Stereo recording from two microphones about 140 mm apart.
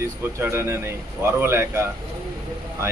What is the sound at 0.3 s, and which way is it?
A man's voice, 20° right (ahead or behind).